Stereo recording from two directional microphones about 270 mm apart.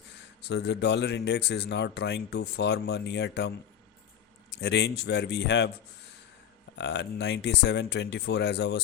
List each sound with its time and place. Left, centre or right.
0.4 s speech: left
4.5 s speech: left
6.7 s speech: left